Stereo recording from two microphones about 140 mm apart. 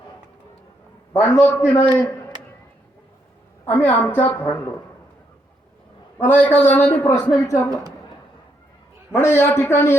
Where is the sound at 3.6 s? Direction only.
15° left (ahead or behind).